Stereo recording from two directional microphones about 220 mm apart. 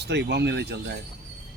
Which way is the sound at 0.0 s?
50° right (ahead or behind).